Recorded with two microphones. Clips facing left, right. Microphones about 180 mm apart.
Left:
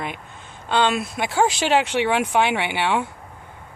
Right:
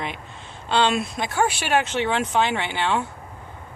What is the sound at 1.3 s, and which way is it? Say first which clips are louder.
Speech: left 4 dB; 90° left.